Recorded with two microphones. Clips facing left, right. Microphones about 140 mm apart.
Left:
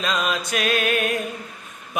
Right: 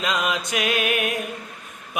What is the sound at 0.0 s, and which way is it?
Mantra, 15° right (ahead or behind).